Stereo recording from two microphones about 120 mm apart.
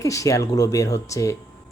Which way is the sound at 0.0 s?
25° left (ahead or behind).